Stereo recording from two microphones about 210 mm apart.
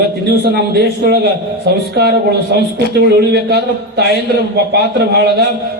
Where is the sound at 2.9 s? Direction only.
50° right (ahead or behind).